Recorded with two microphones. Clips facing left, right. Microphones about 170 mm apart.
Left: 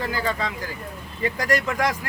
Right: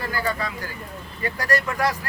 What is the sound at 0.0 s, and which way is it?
Speech, 15° left (ahead or behind).